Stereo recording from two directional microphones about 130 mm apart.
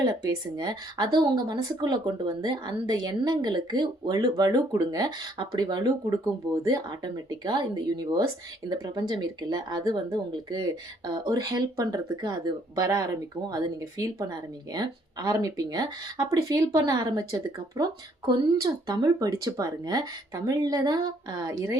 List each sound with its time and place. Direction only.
0.0 s speech: 30° right (ahead or behind)